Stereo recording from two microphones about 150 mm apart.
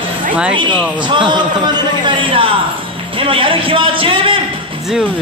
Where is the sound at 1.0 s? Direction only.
30° right (ahead or behind).